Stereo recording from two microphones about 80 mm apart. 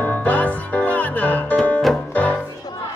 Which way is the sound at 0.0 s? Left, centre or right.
Centre.